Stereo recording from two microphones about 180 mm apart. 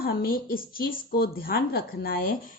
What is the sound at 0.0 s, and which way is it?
Speech, 55° left (ahead or behind).